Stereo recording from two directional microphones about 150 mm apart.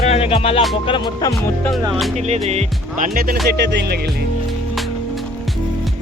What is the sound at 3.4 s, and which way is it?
Speech, 90° right.